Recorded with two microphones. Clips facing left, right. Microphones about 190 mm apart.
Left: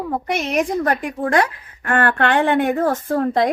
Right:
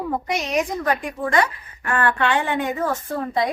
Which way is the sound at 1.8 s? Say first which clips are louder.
Left 3 dB; 70° left (ahead or behind).